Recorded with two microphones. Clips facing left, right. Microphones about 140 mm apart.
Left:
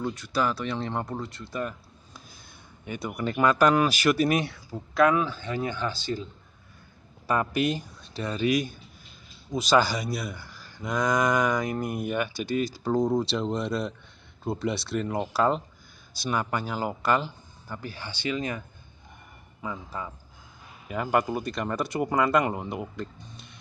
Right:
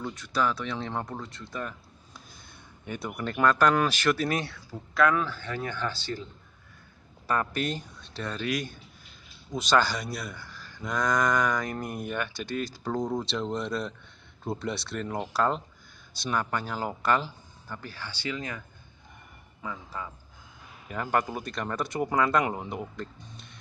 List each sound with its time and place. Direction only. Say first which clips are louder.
0.0 s speech: left 1 dB; 5° left (ahead or behind)
7.2 s speech: left 3 dB; 10° left (ahead or behind)
19.6 s speech: left 2 dB; 20° left (ahead or behind)
20.9 s speech: left 3 dB; 10° left (ahead or behind)